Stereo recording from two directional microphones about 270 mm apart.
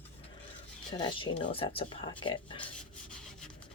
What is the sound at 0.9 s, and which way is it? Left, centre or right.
Speech, centre.